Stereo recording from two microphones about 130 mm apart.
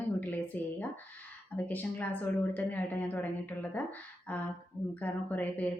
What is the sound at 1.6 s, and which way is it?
A woman's voice, 15° left (ahead or behind).